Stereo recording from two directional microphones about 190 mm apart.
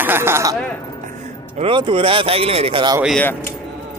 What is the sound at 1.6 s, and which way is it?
Speech, 30° right (ahead or behind).